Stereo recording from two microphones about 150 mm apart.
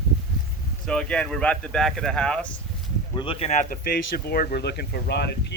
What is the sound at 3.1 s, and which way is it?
Speech, 35° left (ahead or behind).